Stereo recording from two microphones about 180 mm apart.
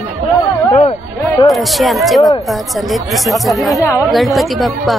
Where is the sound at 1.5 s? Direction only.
Centre (ahead or behind).